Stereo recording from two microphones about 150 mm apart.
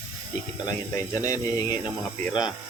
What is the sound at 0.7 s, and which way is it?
Speech, 20° left (ahead or behind).